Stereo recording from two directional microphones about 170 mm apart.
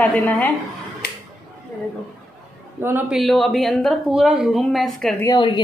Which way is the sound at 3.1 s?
Centre (ahead or behind).